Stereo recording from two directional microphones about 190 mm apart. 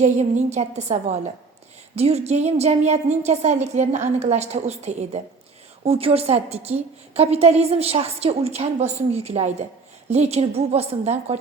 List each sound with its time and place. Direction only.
0.0 s a woman's voice: 35° right (ahead or behind)